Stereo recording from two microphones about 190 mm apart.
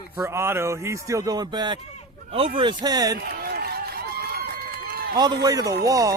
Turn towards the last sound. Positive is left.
turn(degrees=-15)  # may be behind; listen again after turning